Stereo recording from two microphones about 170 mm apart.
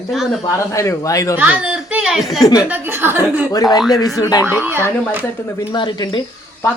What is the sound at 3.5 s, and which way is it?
Speech, 20° left (ahead or behind).